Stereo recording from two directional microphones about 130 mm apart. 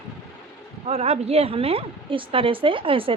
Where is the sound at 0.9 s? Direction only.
50° right (ahead or behind).